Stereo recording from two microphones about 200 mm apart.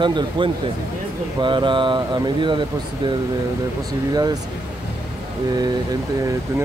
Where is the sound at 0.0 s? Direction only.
25° right (ahead or behind).